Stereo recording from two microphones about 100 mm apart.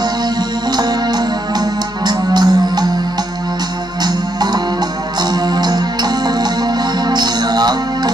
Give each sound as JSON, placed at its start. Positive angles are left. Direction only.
{"t": 0.7, "sound": "music", "side_deg": -45}
{"t": 4.0, "sound": "music", "side_deg": -45}